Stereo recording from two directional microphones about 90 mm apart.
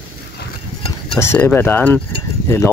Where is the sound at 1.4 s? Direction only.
25° left (ahead or behind).